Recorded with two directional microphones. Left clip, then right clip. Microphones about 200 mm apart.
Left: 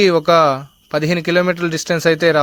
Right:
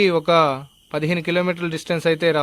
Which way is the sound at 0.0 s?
25° left (ahead or behind).